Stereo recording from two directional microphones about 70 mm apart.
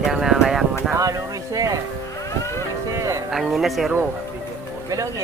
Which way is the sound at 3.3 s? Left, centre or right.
Centre.